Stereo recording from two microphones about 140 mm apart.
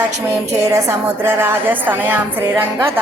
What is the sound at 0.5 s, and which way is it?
A woman's voice, 25° right (ahead or behind).